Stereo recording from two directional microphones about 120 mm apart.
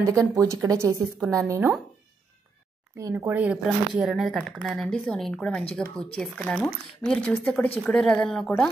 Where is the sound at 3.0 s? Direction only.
25° right (ahead or behind).